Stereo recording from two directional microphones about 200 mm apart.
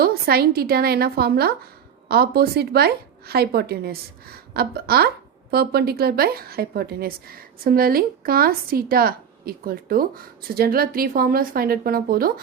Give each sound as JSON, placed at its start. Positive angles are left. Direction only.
{"t": 0.0, "sound": "a woman's voice", "side_deg": -50}